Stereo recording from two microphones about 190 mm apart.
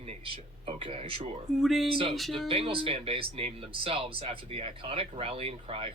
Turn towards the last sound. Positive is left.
turn(degrees=-30)  # may be behind; listen again after turning